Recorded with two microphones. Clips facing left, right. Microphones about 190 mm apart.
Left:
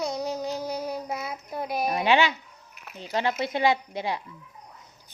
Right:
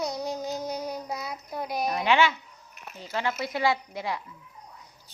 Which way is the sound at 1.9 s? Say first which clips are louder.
Left 1 dB; 20° left (ahead or behind).